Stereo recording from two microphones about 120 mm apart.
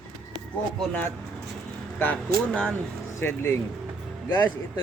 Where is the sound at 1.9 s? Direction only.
15° left (ahead or behind).